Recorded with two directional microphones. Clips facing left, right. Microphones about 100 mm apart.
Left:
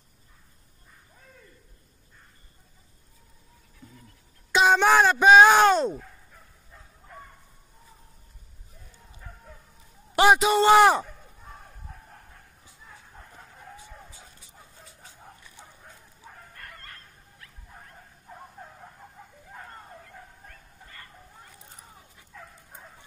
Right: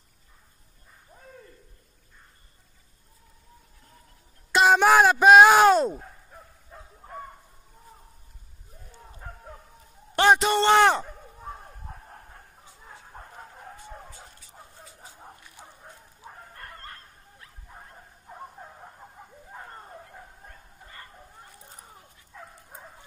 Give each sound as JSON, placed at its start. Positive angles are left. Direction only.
{"t": 4.5, "sound": "speech", "side_deg": 0}
{"t": 10.1, "sound": "a man's voice", "side_deg": 5}
{"t": 16.5, "sound": "bow-wow", "side_deg": -30}
{"t": 20.4, "sound": "bow-wow", "side_deg": -25}
{"t": 22.3, "sound": "dog", "side_deg": -20}